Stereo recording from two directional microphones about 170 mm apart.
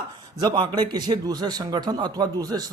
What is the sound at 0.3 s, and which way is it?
Speech, 25° right (ahead or behind).